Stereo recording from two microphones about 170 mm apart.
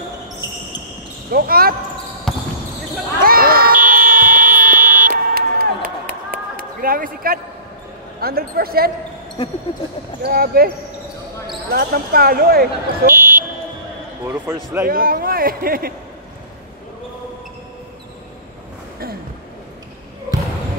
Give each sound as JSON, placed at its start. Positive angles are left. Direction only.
{"t": 1.3, "sound": "speech", "side_deg": -60}
{"t": 2.3, "sound": "basketball bounce", "side_deg": 0}
{"t": 3.3, "sound": "a sound", "side_deg": -60}
{"t": 3.7, "sound": "fire alarm", "side_deg": -10}
{"t": 5.1, "sound": "buzzer", "side_deg": -60}
{"t": 6.3, "sound": "a sound", "side_deg": -55}
{"t": 8.2, "sound": "speech", "side_deg": -60}
{"t": 10.2, "sound": "speech", "side_deg": -60}
{"t": 11.7, "sound": "speech", "side_deg": -60}
{"t": 13.0, "sound": "buzzer", "side_deg": -10}
{"t": 14.2, "sound": "speech", "side_deg": -15}
{"t": 14.9, "sound": "speech", "side_deg": -60}